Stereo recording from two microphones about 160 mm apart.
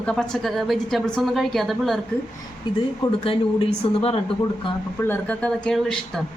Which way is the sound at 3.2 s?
35° left (ahead or behind).